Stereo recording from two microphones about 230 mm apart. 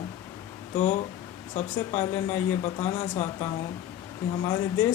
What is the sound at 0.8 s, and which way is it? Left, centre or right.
Speech, left.